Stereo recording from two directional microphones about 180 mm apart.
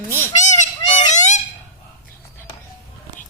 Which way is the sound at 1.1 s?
40° left (ahead or behind).